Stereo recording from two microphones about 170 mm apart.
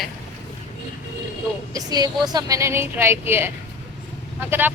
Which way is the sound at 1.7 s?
20° right (ahead or behind).